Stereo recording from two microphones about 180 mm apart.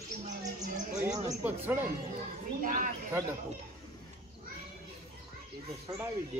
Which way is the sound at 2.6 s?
50° right (ahead or behind).